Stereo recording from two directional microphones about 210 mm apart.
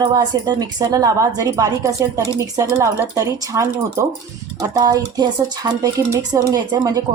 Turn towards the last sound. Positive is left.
turn(degrees=-20)  # may be behind; listen again after turning